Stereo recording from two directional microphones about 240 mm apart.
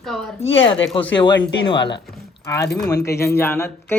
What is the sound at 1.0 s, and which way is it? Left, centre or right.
Speech, left.